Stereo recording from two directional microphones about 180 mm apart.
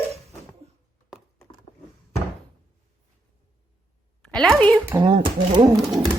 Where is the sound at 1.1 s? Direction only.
Centre (ahead or behind).